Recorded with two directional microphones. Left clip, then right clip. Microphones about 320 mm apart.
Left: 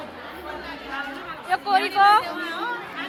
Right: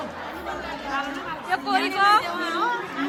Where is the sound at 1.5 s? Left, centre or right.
Centre.